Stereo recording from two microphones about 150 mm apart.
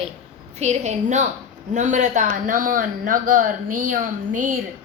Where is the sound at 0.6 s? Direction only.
50° right (ahead or behind).